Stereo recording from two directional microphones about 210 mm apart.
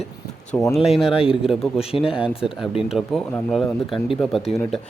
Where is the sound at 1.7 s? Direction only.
25° left (ahead or behind).